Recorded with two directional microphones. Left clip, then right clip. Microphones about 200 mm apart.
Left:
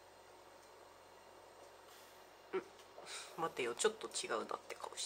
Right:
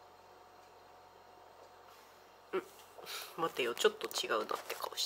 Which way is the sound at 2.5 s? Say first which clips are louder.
Right 4 dB; 15° right (ahead or behind).